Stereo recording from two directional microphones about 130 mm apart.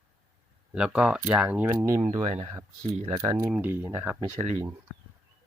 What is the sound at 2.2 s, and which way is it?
Speech, 45° right (ahead or behind).